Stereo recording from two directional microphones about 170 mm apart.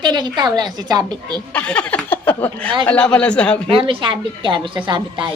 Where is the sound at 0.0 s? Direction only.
25° right (ahead or behind).